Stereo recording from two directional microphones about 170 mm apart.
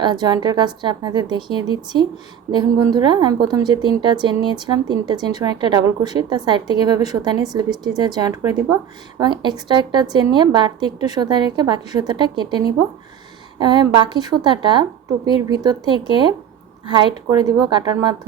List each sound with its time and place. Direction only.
0.0 s a woman's voice: 25° right (ahead or behind)